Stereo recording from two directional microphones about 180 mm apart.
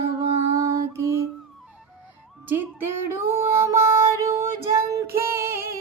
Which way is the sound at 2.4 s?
10° right (ahead or behind).